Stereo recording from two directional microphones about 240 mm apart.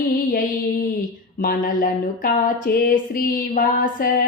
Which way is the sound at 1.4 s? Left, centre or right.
Left.